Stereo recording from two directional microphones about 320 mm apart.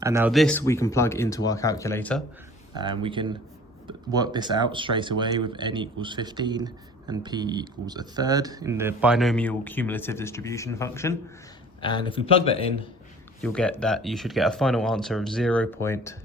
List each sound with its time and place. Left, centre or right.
0.0 s speech: centre
2.7 s speech: centre
13.4 s speech: centre